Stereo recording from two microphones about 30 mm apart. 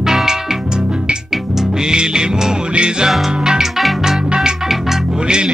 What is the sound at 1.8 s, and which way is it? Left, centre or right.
Music, right.